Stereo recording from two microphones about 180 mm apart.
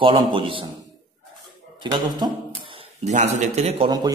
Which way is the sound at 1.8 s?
25° right (ahead or behind).